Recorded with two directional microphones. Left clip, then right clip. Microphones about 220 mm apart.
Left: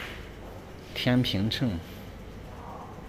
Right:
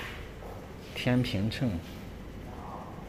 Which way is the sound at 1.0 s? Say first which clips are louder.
Left 3 dB; 10° left (ahead or behind).